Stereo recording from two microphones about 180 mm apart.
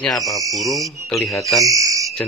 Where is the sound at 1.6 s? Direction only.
20° right (ahead or behind).